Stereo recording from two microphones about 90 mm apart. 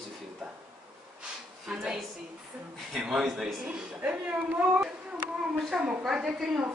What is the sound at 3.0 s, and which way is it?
A man's voice, 5° right (ahead or behind).